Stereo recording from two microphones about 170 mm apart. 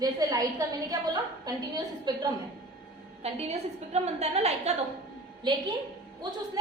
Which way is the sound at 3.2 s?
40° right (ahead or behind).